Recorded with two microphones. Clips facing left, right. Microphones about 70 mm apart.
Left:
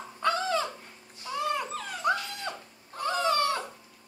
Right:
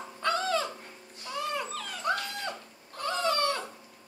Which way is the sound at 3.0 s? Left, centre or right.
Centre.